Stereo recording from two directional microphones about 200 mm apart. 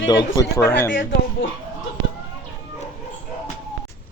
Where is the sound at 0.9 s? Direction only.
45° left (ahead or behind).